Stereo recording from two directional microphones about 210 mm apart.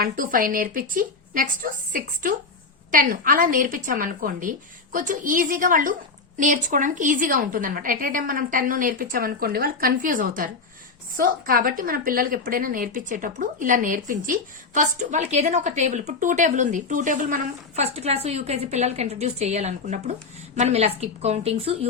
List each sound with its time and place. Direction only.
0.0 s a woman's voice: 40° right (ahead or behind)